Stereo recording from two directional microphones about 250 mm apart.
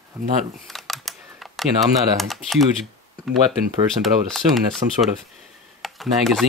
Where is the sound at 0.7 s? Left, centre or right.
Centre.